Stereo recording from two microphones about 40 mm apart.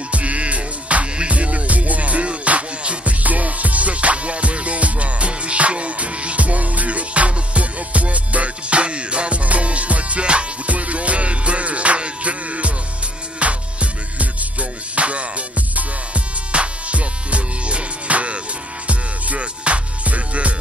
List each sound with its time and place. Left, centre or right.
0.1 s music: right